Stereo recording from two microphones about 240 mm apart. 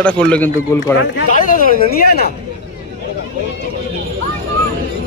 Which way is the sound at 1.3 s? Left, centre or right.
Left.